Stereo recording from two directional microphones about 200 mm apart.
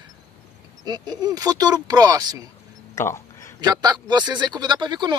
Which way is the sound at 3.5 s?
20° right (ahead or behind).